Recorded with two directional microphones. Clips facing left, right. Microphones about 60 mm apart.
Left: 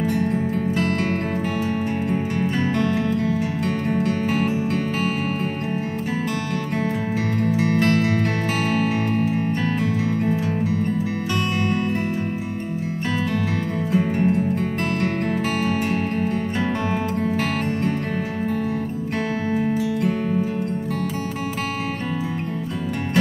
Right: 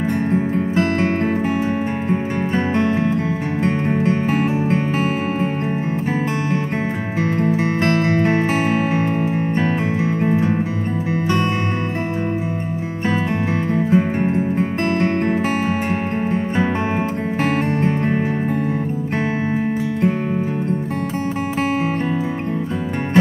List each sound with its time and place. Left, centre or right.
0.3 s music: right
2.0 s music: right
7.2 s music: right
13.8 s music: right
17.4 s music: right